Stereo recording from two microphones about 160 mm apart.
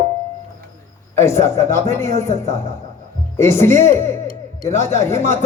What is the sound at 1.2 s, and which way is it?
A man's voice, 15° left (ahead or behind).